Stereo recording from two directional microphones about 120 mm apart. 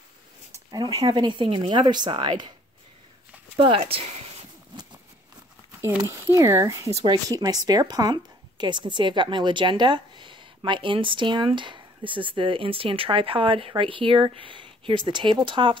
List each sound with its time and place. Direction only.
0.7 s a woman's voice: 35° right (ahead or behind)
3.5 s speech: 45° right (ahead or behind)
6.0 s a woman's voice: 25° right (ahead or behind); by 15.8 s 45° right (ahead or behind)